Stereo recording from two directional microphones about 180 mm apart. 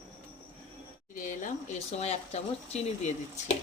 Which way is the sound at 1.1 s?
45° left (ahead or behind).